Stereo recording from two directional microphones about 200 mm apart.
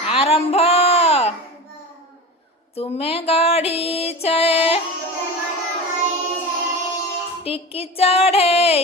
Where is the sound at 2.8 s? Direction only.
30° left (ahead or behind).